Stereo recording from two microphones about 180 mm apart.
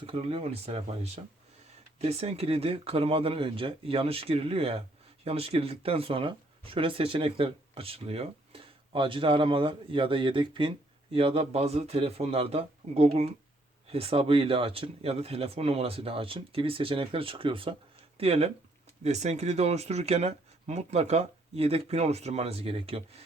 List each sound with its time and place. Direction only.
0.0 s speech: 30° right (ahead or behind)